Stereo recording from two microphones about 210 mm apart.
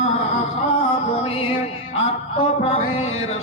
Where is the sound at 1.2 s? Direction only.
25° left (ahead or behind).